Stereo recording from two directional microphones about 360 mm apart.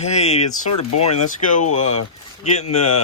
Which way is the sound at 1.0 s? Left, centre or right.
Centre.